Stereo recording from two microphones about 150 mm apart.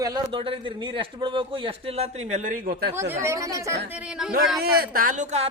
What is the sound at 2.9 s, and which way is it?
Speech, 15° right (ahead or behind).